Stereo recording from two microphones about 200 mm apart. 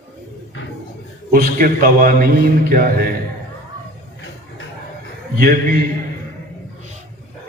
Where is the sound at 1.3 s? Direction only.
45° right (ahead or behind).